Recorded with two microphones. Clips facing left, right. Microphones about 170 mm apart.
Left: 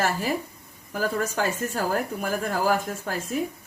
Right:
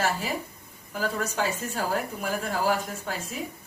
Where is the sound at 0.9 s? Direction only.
50° left (ahead or behind).